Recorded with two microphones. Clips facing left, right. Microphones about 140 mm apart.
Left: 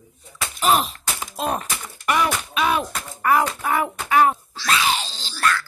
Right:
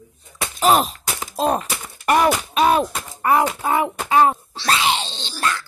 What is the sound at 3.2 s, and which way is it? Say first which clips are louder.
Speech: right 2 dB; 25° right (ahead or behind).